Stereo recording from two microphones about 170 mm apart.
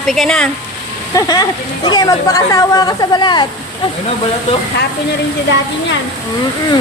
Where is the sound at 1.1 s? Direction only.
20° left (ahead or behind).